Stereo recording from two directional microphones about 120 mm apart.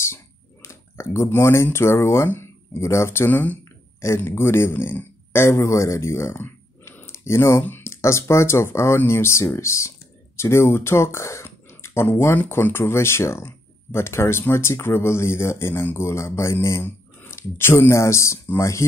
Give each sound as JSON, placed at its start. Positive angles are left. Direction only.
{"t": 0.1, "sound": "speech", "side_deg": 20}